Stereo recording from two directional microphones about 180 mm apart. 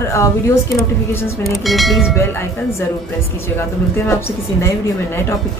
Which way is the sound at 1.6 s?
Centre (ahead or behind).